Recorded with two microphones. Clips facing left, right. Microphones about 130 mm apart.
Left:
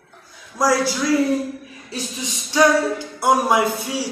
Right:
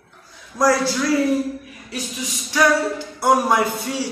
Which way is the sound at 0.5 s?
10° left (ahead or behind).